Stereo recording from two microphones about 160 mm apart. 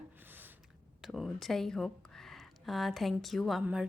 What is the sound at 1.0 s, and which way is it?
Speech, centre (ahead or behind).